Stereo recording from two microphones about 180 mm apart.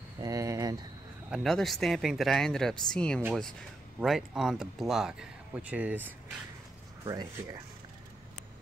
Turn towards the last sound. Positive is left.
turn(degrees=-20)  # may be behind; listen again after turning